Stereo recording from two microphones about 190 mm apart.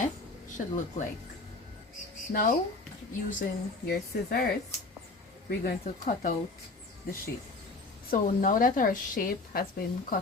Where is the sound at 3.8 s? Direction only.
55° left (ahead or behind).